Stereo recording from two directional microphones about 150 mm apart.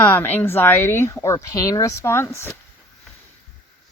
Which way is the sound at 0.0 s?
15° left (ahead or behind).